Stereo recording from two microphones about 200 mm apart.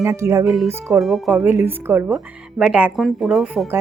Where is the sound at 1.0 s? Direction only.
Centre (ahead or behind).